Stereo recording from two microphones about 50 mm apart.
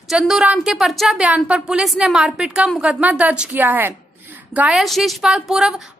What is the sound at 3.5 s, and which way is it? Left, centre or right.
Speech, right.